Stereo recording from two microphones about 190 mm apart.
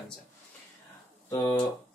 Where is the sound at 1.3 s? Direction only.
15° left (ahead or behind).